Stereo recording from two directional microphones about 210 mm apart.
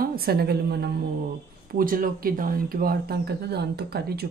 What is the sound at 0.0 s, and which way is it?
A woman's voice, 45° right (ahead or behind).